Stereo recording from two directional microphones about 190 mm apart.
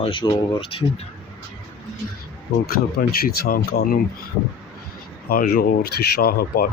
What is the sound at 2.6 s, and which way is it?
Speech, 50° left (ahead or behind).